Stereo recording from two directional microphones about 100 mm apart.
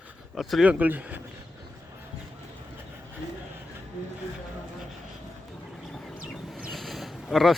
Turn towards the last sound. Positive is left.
turn(degrees=0)  # may be behind; listen again after turning